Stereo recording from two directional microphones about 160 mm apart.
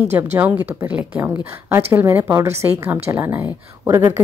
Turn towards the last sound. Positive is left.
turn(degrees=-15)  # may be behind; listen again after turning